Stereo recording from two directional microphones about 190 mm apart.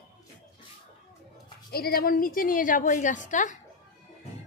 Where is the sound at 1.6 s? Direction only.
55° left (ahead or behind).